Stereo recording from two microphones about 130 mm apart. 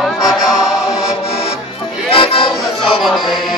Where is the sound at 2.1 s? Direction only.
40° left (ahead or behind).